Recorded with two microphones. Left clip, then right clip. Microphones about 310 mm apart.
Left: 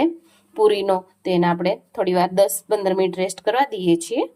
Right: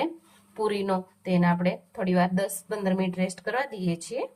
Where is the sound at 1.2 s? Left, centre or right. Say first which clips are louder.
Left 7 dB; centre.